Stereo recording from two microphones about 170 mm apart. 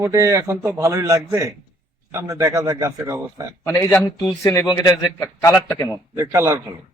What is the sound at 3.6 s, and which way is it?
A man's voice, 15° left (ahead or behind).